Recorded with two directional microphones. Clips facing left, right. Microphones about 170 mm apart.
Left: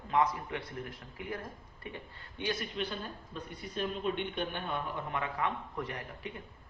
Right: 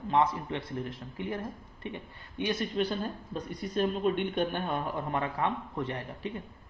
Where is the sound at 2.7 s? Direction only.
40° right (ahead or behind).